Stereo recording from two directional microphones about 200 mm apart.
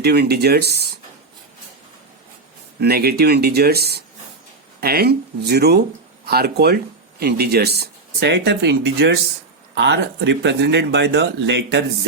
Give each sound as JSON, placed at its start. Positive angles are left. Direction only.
{"t": 0.0, "sound": "speech", "side_deg": -55}
{"t": 2.8, "sound": "speech", "side_deg": -50}